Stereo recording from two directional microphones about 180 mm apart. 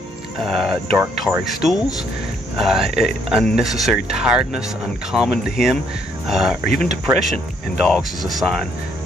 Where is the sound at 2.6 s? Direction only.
Centre (ahead or behind).